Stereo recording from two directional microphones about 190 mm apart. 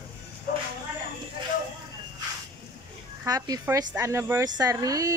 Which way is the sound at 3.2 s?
20° right (ahead or behind).